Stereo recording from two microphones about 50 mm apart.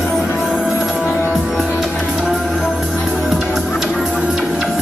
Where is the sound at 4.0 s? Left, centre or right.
Centre.